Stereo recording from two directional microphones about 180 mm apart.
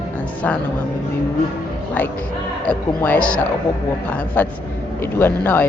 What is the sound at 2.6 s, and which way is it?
Speech, 10° left (ahead or behind).